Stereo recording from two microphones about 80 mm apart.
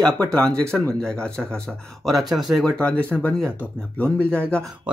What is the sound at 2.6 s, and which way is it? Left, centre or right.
Speech, centre.